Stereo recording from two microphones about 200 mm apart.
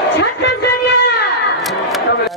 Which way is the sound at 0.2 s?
60° left (ahead or behind).